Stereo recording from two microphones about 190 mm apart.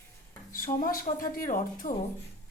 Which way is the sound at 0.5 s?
45° left (ahead or behind).